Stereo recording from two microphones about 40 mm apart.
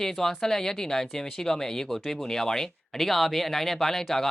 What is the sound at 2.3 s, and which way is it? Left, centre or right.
Speech, centre.